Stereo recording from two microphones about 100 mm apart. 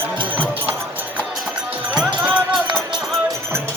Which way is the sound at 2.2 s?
5° right (ahead or behind).